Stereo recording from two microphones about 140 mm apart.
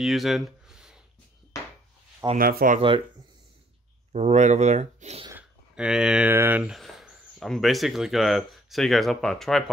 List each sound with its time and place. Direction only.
0.0 s a sound: centre (ahead or behind)
2.3 s speech: 90° right
4.1 s speech: 55° right (ahead or behind)
5.8 s speech: 5° right (ahead or behind)
6.3 s speech: 15° right (ahead or behind)
6.6 s speech: centre (ahead or behind)